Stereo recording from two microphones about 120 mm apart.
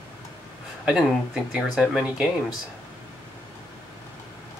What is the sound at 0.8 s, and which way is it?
Speech, centre (ahead or behind).